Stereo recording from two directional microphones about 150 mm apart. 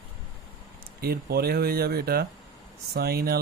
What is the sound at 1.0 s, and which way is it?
Speech, 90° right.